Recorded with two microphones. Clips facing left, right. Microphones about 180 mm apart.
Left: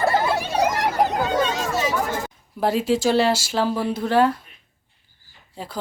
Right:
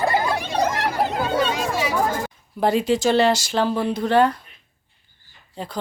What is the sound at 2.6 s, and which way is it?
Speech, 5° left (ahead or behind).